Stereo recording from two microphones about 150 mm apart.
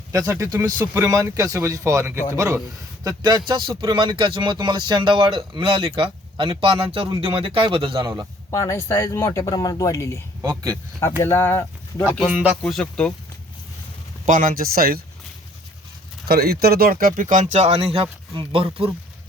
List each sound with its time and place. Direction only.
0.1 s speech: 20° right (ahead or behind)
7.9 s speech: 20° right (ahead or behind)
8.4 s speech: 20° left (ahead or behind)
10.4 s speech: 20° right (ahead or behind)
11.2 s speech: 15° left (ahead or behind)
12.1 s speech: centre (ahead or behind)
14.3 s speech: 65° right (ahead or behind); by 15.0 s 80° right
16.2 s speech: 90° right; by 18.9 s 40° right (ahead or behind)